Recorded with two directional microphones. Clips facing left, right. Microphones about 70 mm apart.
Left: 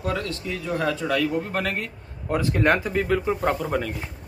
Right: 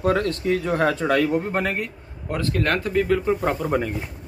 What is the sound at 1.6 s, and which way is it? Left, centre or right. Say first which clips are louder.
Speech: right 3 dB; centre.